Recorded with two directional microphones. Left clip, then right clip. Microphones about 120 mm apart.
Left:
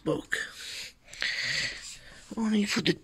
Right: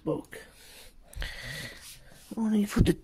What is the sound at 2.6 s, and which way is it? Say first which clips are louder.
Speech: left 1 dB; 60° right (ahead or behind).